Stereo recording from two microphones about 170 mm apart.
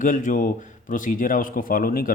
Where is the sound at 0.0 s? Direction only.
50° left (ahead or behind).